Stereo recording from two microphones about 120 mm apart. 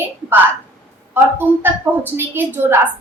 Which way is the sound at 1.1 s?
20° right (ahead or behind).